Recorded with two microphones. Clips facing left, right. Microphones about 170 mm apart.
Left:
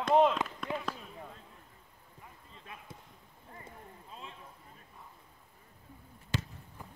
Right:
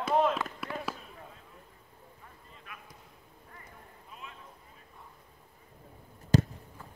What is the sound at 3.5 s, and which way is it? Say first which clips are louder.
Clip-clop: left 4 dB; 30° left (ahead or behind).